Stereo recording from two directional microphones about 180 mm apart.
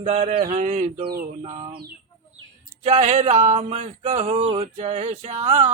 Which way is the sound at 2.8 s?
35° right (ahead or behind).